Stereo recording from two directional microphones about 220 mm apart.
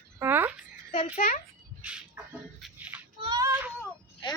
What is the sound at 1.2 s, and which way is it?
Speech, 40° left (ahead or behind).